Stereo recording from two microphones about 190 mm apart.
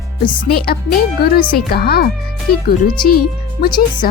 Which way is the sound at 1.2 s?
55° left (ahead or behind).